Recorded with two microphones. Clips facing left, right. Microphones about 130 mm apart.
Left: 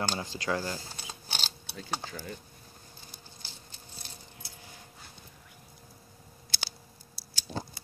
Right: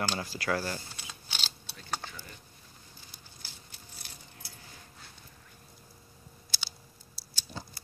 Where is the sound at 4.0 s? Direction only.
25° left (ahead or behind).